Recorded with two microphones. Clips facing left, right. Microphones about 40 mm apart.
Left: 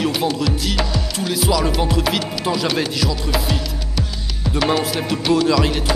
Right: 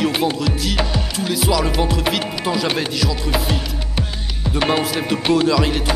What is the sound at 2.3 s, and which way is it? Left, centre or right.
Music, centre.